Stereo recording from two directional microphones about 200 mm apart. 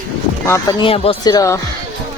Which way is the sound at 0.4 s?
15° left (ahead or behind).